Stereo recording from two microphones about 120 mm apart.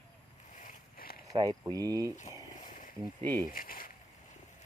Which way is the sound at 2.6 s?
90° left.